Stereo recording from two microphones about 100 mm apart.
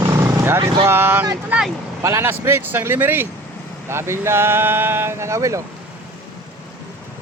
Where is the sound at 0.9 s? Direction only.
25° right (ahead or behind).